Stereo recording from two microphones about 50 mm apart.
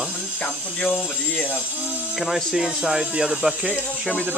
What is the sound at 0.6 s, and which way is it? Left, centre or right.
Speech, left.